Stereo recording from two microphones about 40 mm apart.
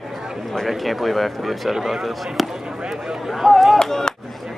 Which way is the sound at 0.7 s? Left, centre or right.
Centre.